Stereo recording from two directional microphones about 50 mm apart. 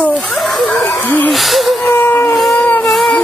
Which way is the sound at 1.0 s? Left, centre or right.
Left.